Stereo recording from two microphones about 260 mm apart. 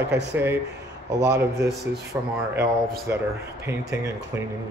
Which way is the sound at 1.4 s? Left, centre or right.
Centre.